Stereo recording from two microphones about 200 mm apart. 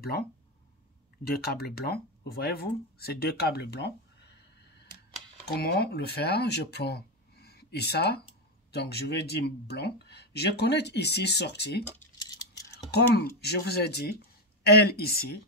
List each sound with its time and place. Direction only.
1.2 s speech: 50° left (ahead or behind)
5.5 s speech: 50° left (ahead or behind)
12.2 s a sound: 20° left (ahead or behind)
13.4 s speech: 55° left (ahead or behind)